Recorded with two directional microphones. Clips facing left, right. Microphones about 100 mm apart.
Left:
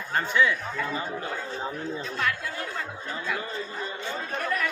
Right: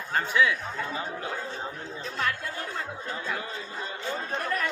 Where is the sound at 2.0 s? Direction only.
35° right (ahead or behind).